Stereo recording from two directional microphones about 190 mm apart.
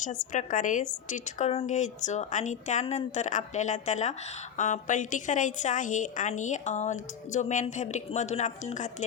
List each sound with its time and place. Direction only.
0.0 s a woman's voice: 40° left (ahead or behind)